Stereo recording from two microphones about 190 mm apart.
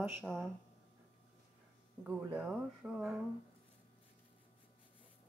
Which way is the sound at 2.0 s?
10° right (ahead or behind).